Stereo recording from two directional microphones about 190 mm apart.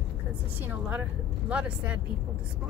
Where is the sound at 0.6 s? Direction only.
10° right (ahead or behind).